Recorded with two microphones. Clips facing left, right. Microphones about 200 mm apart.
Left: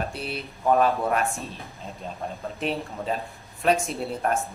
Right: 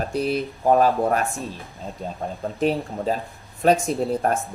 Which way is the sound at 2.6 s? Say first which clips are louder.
Right 7 dB; 40° right (ahead or behind).